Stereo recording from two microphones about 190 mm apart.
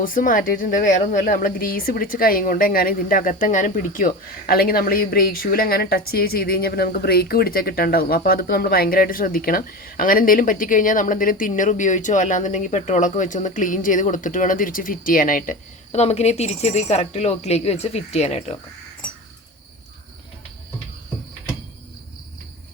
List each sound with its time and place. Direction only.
0.0 s a woman's voice: 45° left (ahead or behind)